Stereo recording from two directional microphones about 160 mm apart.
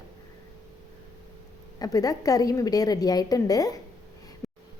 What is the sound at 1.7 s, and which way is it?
A woman's voice, 20° left (ahead or behind).